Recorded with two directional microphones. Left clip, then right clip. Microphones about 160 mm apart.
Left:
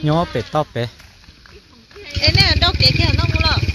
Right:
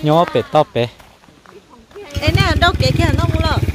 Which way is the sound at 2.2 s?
85° right.